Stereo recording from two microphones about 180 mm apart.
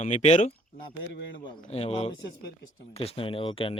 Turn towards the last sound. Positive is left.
turn(degrees=30)  # may be behind; listen again after turning